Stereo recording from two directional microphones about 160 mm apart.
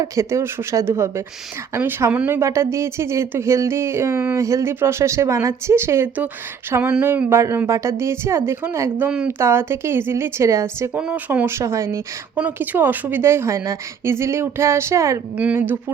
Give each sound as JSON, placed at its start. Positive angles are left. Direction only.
{"t": 0.0, "sound": "speech", "side_deg": -20}